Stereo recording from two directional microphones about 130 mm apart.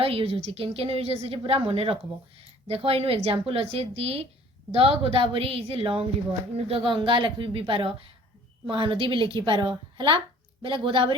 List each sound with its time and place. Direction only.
0.0 s a woman's voice: 45° right (ahead or behind)